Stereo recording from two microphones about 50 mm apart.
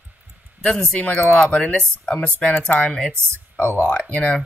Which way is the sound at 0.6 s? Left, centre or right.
Centre.